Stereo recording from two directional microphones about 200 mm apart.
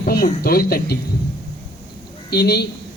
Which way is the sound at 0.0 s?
45° left (ahead or behind).